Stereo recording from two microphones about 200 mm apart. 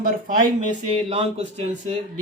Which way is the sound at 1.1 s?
30° right (ahead or behind).